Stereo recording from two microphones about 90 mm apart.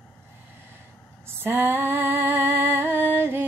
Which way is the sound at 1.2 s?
25° right (ahead or behind).